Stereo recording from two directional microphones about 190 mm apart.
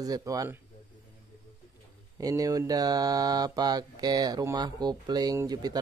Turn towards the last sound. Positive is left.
turn(degrees=-20)  # may be behind; listen again after turning